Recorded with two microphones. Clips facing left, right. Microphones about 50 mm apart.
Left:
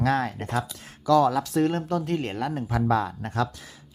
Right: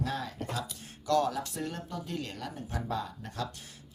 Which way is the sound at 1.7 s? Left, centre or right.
Left.